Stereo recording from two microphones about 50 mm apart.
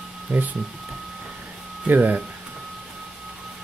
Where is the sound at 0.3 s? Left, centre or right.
Right.